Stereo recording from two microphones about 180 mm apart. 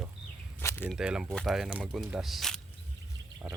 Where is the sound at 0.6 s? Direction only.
15° left (ahead or behind).